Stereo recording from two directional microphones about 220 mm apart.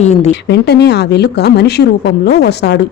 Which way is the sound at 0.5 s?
50° left (ahead or behind).